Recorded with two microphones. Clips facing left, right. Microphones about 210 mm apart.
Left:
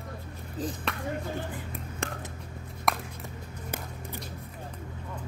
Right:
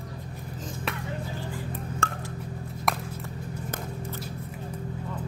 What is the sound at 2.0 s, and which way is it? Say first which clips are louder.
Telephone dialing: even; 15° left (ahead or behind).